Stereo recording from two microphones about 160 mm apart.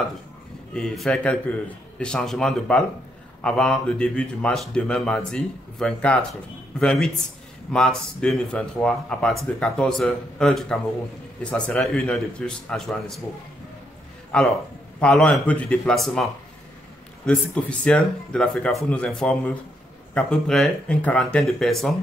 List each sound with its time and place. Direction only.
0.7 s a man's voice: 5° left (ahead or behind)
14.3 s a man's voice: 5° left (ahead or behind)
17.3 s a man's voice: 5° left (ahead or behind)